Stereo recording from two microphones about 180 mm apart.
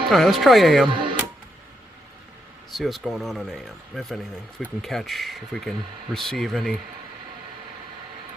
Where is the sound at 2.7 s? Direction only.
Centre (ahead or behind).